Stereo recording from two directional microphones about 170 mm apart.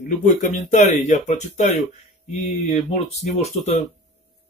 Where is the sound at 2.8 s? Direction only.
40° left (ahead or behind).